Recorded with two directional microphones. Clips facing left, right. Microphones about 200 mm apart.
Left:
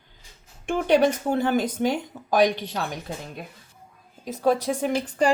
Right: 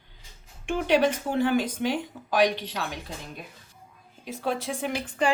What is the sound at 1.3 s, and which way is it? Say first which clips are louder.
Speech: left 1 dB; 45° left (ahead or behind).